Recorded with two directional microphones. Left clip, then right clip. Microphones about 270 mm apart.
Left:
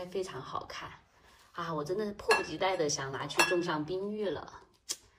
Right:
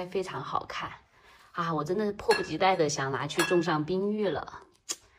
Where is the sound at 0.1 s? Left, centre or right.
Centre.